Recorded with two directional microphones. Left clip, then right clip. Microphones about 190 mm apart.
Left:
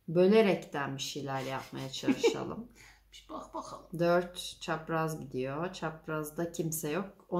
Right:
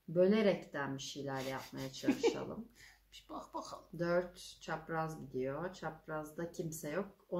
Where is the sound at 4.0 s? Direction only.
50° left (ahead or behind).